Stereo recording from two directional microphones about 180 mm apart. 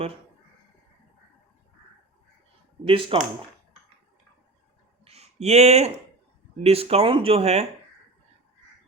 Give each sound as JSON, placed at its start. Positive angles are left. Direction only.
{"t": 2.8, "sound": "speech", "side_deg": -30}
{"t": 5.0, "sound": "a sound", "side_deg": -35}
{"t": 6.6, "sound": "speech", "side_deg": -35}